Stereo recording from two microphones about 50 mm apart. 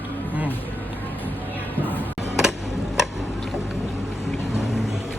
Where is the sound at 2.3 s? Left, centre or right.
Centre.